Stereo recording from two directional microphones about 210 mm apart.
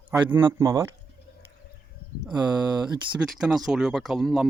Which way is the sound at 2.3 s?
20° right (ahead or behind).